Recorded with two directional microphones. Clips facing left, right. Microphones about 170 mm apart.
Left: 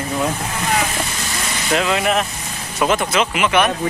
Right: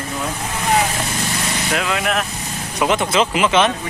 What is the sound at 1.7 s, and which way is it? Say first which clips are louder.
Speech: left 4 dB; centre (ahead or behind).